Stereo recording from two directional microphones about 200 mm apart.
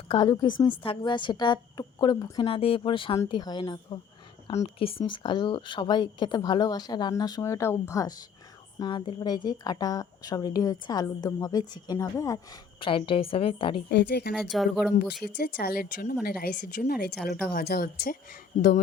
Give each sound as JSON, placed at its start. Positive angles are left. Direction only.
{"t": 0.1, "sound": "a woman's voice", "side_deg": 20}
{"t": 13.9, "sound": "speech", "side_deg": 55}
{"t": 14.3, "sound": "speech", "side_deg": 0}
{"t": 15.2, "sound": "a woman's voice", "side_deg": 50}
{"t": 18.5, "sound": "speech", "side_deg": 40}